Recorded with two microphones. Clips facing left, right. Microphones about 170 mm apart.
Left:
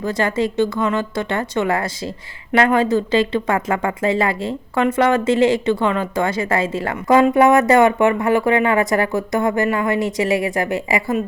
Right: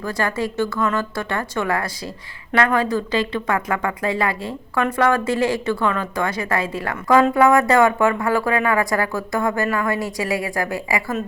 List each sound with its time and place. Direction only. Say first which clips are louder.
0.0 s speech: left 4 dB; 20° left (ahead or behind)